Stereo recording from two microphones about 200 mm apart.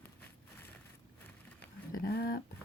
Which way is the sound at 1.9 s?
50° left (ahead or behind).